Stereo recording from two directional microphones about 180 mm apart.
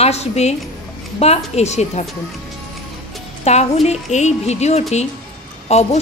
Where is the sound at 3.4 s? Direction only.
35° left (ahead or behind).